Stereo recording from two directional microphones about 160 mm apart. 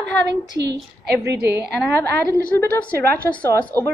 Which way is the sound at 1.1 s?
90° right.